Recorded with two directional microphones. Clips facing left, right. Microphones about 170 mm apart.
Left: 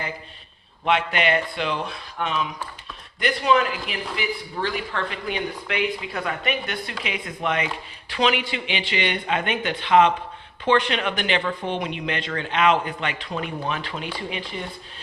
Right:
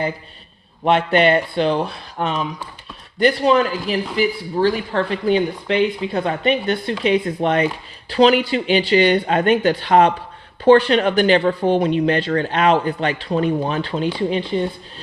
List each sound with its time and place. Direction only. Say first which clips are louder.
0.9 s speech: right 7 dB; 35° right (ahead or behind)